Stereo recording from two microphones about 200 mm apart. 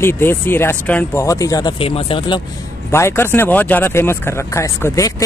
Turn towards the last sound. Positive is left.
turn(degrees=15)  # may be behind; listen again after turning